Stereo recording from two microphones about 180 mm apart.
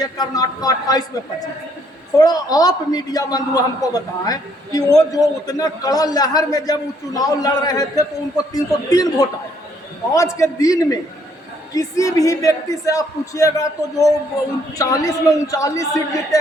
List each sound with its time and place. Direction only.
0.0 s a man's voice: 20° left (ahead or behind)
2.1 s a man's voice: 20° left (ahead or behind)